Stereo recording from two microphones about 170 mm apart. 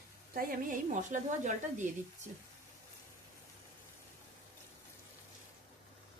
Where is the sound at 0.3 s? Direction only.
50° right (ahead or behind).